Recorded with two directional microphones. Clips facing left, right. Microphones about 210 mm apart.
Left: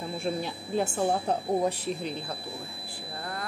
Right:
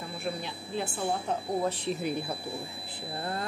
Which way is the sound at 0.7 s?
45° left (ahead or behind).